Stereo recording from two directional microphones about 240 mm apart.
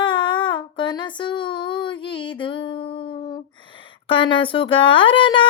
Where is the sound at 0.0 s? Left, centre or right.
Centre.